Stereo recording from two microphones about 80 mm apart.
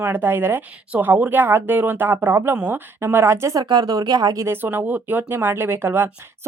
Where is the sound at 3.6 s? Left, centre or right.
Right.